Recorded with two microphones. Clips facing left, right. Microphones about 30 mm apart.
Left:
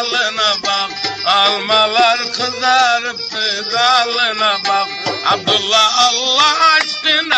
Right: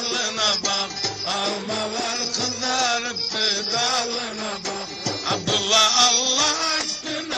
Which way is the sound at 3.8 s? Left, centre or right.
Left.